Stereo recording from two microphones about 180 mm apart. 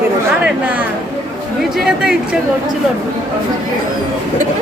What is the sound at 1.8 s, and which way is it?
Speech, 5° right (ahead or behind).